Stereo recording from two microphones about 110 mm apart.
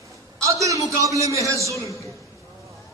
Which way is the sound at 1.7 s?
30° left (ahead or behind).